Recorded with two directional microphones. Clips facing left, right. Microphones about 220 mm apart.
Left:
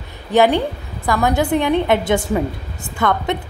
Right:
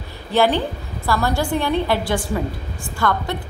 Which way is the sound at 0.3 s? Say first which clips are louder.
Left 3 dB; 15° left (ahead or behind).